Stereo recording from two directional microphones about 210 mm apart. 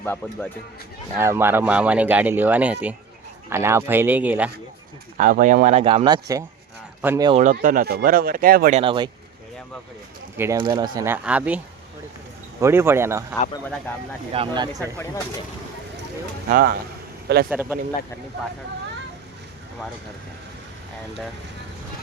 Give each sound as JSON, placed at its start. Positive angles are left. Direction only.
{"t": 0.0, "sound": "speech", "side_deg": 10}
{"t": 1.2, "sound": "speech", "side_deg": -10}
{"t": 5.1, "sound": "speech", "side_deg": -40}
{"t": 7.3, "sound": "speech", "side_deg": -30}
{"t": 7.5, "sound": "speech", "side_deg": -40}
{"t": 8.8, "sound": "speech", "side_deg": -25}
{"t": 10.3, "sound": "speech", "side_deg": -10}
{"t": 14.3, "sound": "speech", "side_deg": -20}
{"t": 16.5, "sound": "speech", "side_deg": -45}
{"t": 17.5, "sound": "speech", "side_deg": -10}